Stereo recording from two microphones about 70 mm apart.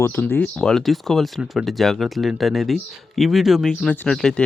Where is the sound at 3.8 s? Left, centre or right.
Left.